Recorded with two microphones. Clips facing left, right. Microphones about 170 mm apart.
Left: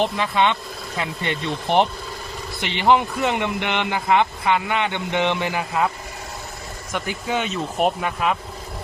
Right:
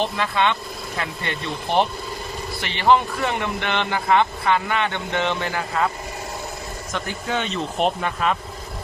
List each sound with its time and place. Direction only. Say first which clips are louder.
0.0 s speech: left 2 dB; 15° left (ahead or behind)
6.9 s speech: left 2 dB; 10° left (ahead or behind)